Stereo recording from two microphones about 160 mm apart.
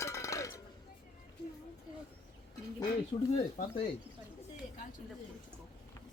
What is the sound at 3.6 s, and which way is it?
Speech, 55° left (ahead or behind).